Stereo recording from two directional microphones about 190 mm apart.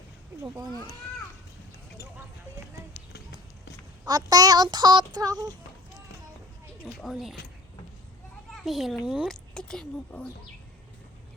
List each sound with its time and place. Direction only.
0.4 s child singing: 20° right (ahead or behind)
4.0 s child singing: 20° right (ahead or behind)
6.8 s speech: centre (ahead or behind)
8.5 s a child's voice: centre (ahead or behind)